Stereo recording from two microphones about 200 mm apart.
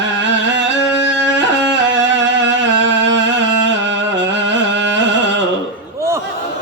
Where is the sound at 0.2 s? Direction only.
65° right (ahead or behind).